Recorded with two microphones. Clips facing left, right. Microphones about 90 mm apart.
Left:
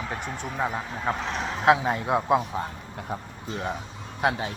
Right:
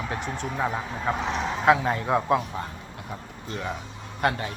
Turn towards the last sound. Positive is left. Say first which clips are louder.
# even
turn(degrees=10)  # may be behind; listen again after turning